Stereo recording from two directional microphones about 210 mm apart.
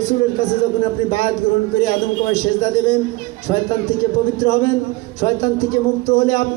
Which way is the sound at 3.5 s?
35° left (ahead or behind).